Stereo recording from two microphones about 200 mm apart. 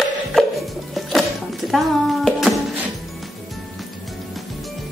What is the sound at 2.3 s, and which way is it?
Music, centre (ahead or behind).